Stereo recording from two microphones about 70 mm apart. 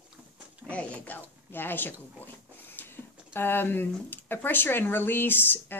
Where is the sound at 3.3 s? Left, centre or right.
Left.